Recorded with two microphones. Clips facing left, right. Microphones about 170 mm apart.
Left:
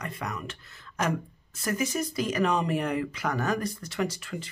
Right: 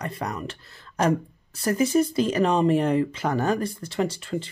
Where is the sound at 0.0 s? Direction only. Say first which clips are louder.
Right 5 dB; 35° right (ahead or behind).